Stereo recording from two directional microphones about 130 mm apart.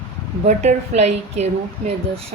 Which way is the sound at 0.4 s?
65° right (ahead or behind).